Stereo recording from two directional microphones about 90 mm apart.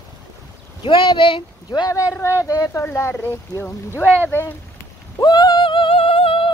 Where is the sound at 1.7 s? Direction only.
40° left (ahead or behind).